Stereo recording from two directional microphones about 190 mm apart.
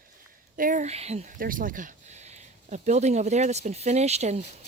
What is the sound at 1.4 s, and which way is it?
Speech, 45° right (ahead or behind).